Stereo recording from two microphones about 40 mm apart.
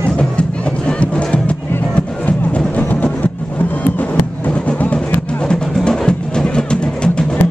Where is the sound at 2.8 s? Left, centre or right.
Left.